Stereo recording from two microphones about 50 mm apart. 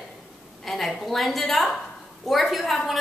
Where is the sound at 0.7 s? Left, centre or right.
Centre.